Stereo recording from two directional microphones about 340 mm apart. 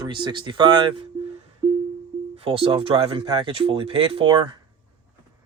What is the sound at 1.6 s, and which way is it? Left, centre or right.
Music, centre.